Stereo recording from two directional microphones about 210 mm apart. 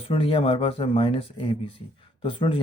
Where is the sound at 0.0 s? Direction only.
25° left (ahead or behind).